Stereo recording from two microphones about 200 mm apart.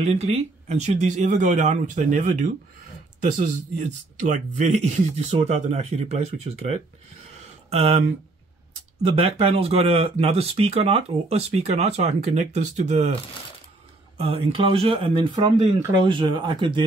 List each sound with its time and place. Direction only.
0.0 s speech: 30° right (ahead or behind)
4.2 s speech: 35° right (ahead or behind)
9.1 s speech: 30° right (ahead or behind)
14.1 s speech: 30° right (ahead or behind)